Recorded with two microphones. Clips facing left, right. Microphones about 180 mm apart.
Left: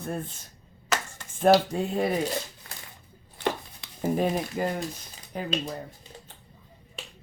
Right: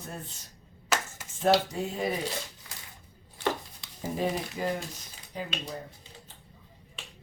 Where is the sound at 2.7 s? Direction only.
50° left (ahead or behind).